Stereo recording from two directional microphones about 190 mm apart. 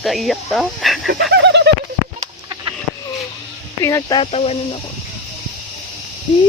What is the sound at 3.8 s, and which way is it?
Speech, 15° left (ahead or behind).